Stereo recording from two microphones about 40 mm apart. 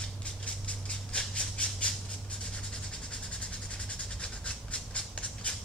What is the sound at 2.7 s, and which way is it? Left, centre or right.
Train, left.